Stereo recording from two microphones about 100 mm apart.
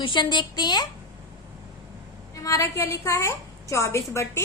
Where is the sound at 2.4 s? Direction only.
30° left (ahead or behind).